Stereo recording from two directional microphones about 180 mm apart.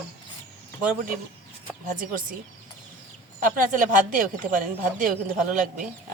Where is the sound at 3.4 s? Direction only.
45° right (ahead or behind).